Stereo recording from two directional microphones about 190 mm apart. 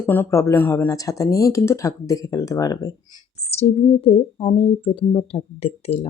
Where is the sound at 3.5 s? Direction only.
35° left (ahead or behind).